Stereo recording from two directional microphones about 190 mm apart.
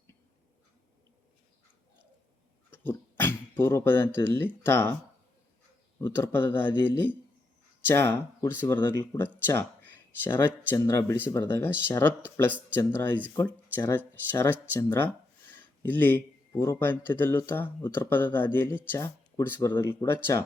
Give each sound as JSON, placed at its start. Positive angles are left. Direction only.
{"t": 2.6, "sound": "a sound", "side_deg": 10}
{"t": 4.3, "sound": "speech", "side_deg": 10}
{"t": 6.0, "sound": "speech", "side_deg": 10}